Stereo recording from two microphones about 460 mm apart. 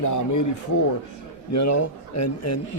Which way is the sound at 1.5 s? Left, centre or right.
Left.